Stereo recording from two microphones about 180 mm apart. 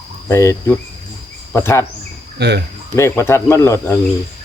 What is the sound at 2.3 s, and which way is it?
Speech, 65° right (ahead or behind).